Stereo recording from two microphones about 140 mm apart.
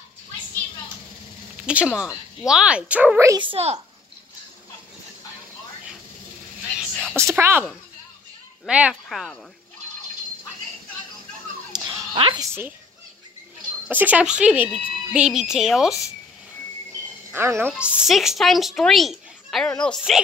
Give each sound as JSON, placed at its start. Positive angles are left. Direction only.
{"t": 1.7, "sound": "speech", "side_deg": -10}
{"t": 3.3, "sound": "a child's voice", "side_deg": -40}
{"t": 7.2, "sound": "speech", "side_deg": -20}
{"t": 8.6, "sound": "speech", "side_deg": -10}
{"t": 11.7, "sound": "a sound", "side_deg": -30}
{"t": 13.8, "sound": "speech", "side_deg": -10}
{"t": 17.3, "sound": "a woman's voice", "side_deg": -15}